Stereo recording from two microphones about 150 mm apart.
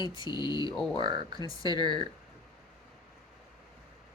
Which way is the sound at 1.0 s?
30° right (ahead or behind).